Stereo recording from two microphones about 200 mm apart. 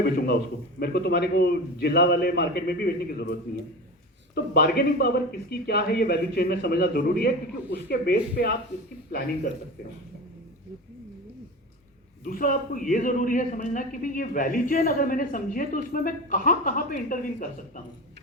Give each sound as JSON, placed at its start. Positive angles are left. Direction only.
{"t": 0.8, "sound": "a man's voice", "side_deg": 55}
{"t": 4.4, "sound": "a man's voice", "side_deg": 50}
{"t": 12.2, "sound": "a man's voice", "side_deg": 45}